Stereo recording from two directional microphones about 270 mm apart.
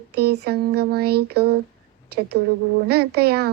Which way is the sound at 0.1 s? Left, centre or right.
Right.